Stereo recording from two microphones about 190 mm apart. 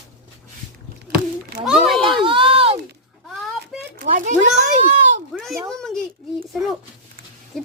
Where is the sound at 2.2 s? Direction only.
25° right (ahead or behind).